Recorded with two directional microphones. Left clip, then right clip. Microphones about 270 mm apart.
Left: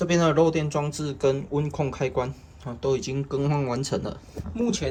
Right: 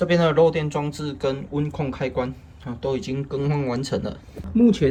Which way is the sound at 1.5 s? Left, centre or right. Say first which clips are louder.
Even; left.